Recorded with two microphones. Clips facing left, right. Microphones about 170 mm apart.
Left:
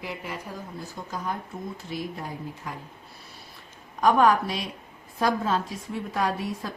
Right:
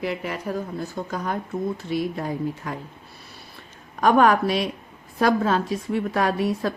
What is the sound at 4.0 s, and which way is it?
A woman's voice, 70° right (ahead or behind).